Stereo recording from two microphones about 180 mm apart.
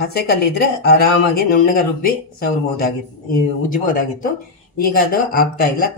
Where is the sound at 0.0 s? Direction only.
60° left (ahead or behind).